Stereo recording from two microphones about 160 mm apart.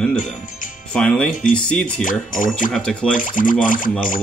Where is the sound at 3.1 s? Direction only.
55° left (ahead or behind).